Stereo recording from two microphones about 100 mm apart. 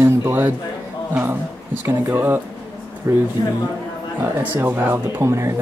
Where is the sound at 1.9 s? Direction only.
25° right (ahead or behind).